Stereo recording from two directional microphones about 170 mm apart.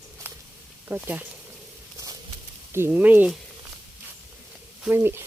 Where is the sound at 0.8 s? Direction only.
10° right (ahead or behind).